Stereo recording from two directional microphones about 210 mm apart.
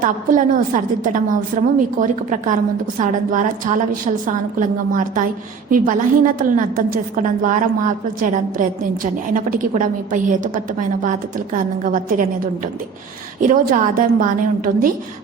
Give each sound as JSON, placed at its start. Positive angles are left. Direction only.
{"t": 0.0, "sound": "a woman's voice", "side_deg": -40}
{"t": 13.4, "sound": "a woman's voice", "side_deg": -40}